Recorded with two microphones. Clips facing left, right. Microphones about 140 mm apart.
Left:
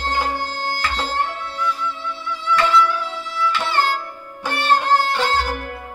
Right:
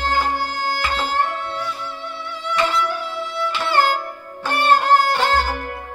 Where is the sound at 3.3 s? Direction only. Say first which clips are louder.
Right 1 dB; 50° right (ahead or behind).